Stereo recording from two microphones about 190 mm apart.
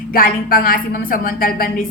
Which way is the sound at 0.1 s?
50° left (ahead or behind).